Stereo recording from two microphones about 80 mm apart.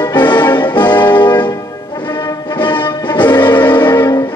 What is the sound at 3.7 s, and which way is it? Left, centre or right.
Music, left.